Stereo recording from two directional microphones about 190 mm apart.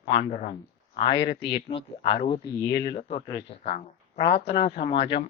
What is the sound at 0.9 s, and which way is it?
Speech, 25° left (ahead or behind).